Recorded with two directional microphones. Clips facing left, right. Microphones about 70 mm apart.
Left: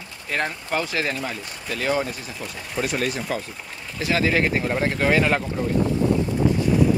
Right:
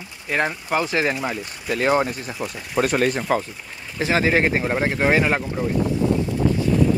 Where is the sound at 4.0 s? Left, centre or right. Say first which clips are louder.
Right 2 dB; right.